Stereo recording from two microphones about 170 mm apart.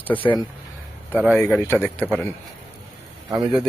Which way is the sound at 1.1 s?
5° right (ahead or behind).